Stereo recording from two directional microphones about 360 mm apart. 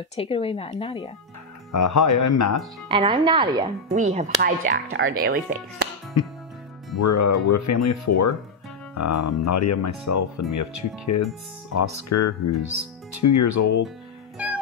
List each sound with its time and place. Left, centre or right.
0.1 s speech: centre
1.7 s speech: left
2.9 s speech: centre
6.2 s speech: left